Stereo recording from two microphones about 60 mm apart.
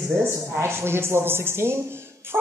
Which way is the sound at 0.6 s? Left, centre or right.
Right.